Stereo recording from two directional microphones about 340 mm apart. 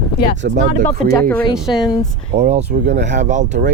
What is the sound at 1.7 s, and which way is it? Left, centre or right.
Speech, centre.